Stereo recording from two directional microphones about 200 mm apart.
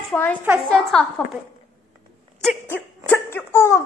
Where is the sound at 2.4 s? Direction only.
5° left (ahead or behind).